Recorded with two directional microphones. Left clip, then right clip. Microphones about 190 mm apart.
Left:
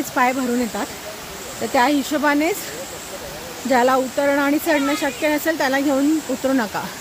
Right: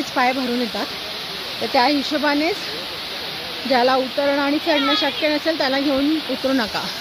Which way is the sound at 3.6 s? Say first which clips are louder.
Left 1 dB; 20° left (ahead or behind).